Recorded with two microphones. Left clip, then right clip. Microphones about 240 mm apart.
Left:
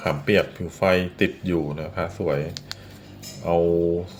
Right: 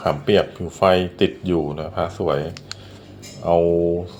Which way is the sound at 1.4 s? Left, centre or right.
Left.